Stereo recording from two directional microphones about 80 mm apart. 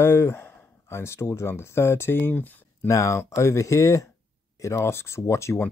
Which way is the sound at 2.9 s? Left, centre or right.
Left.